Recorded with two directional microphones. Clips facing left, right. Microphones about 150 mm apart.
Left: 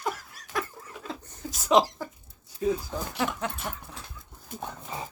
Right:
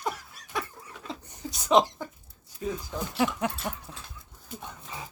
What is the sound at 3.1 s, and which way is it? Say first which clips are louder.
Speech: right 4 dB; 15° right (ahead or behind).